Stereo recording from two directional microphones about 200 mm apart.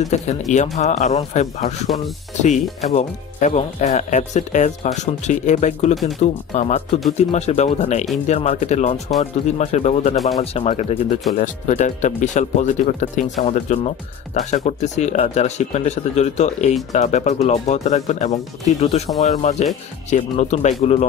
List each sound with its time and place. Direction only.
0.1 s speech: 35° left (ahead or behind)